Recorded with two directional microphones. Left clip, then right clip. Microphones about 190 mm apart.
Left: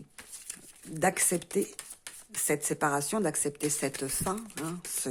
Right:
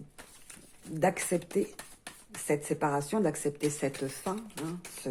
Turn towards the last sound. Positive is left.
turn(degrees=25)  # may be behind; listen again after turning